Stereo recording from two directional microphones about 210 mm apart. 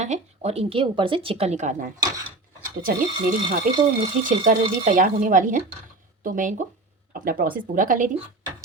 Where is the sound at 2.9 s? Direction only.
45° right (ahead or behind).